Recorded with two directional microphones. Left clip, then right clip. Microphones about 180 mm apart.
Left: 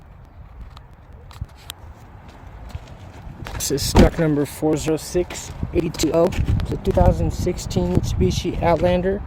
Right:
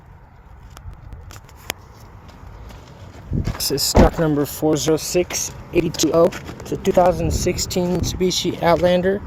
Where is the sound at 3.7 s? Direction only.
20° left (ahead or behind).